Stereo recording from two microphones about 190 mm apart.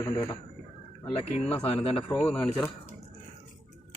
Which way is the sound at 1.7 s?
30° left (ahead or behind).